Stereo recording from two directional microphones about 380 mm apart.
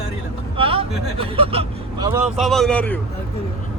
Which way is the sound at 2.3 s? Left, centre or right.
Centre.